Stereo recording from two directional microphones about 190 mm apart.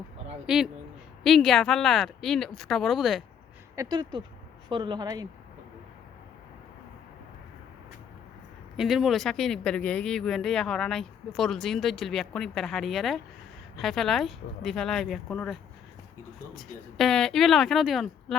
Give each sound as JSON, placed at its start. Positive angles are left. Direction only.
{"t": 0.4, "sound": "speech", "side_deg": -5}
{"t": 3.8, "sound": "speech", "side_deg": -25}
{"t": 8.7, "sound": "speech", "side_deg": 0}